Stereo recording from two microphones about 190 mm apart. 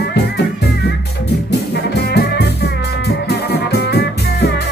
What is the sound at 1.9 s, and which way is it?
Music, 60° left (ahead or behind).